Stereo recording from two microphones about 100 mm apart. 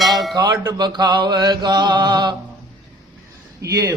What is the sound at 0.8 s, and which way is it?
Mantra, 45° right (ahead or behind).